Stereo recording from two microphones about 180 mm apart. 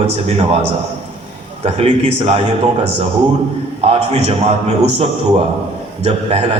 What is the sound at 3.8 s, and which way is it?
Speech, 35° right (ahead or behind).